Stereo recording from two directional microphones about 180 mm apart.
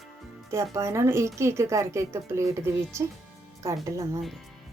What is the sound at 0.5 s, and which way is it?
A woman's voice, 15° right (ahead or behind).